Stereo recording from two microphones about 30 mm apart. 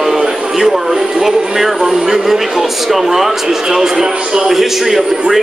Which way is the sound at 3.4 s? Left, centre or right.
Centre.